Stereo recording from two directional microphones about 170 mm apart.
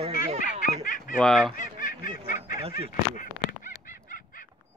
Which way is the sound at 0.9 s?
50° left (ahead or behind).